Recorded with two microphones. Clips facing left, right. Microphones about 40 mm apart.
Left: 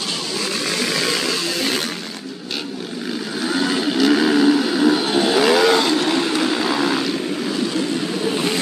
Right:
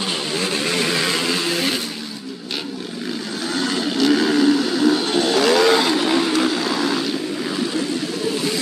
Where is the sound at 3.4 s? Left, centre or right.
Centre.